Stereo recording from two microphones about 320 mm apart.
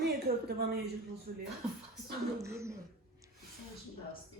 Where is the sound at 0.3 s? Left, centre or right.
Right.